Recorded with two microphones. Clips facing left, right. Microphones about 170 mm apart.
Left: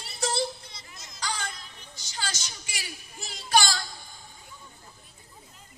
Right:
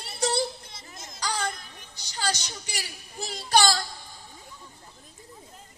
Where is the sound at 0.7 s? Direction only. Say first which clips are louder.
Right 4 dB; 50° right (ahead or behind).